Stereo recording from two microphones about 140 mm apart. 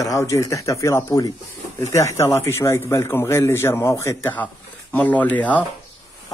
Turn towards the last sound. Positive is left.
turn(degrees=10)  # may be behind; listen again after turning